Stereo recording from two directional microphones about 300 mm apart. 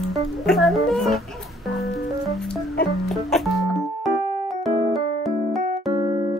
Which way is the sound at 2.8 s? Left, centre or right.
Centre.